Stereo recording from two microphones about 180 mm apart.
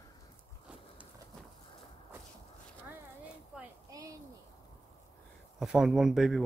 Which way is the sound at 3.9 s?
20° right (ahead or behind).